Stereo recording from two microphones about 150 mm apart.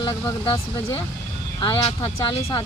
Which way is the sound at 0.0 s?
25° left (ahead or behind).